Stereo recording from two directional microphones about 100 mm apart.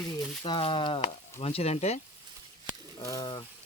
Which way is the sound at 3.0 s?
40° left (ahead or behind).